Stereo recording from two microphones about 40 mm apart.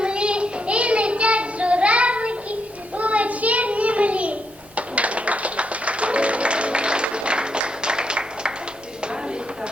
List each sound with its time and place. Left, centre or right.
0.0 s child singing: right
3.0 s a sound: right
4.9 s music: right